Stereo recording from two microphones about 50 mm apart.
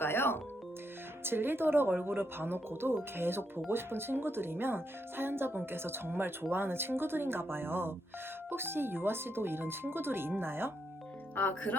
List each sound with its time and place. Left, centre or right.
0.0 s music: left
1.2 s speech: right
11.3 s speech: left